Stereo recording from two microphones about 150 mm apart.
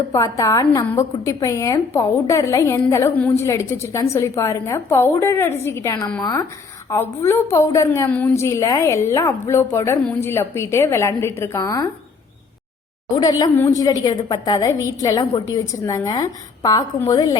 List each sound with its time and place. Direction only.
0.1 s a woman's voice: 20° left (ahead or behind)
13.1 s a woman's voice: 25° left (ahead or behind)